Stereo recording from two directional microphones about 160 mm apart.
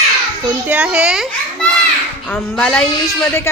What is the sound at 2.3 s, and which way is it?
Speech, 5° left (ahead or behind).